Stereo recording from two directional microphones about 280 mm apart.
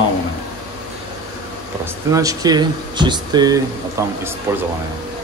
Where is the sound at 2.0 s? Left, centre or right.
Centre.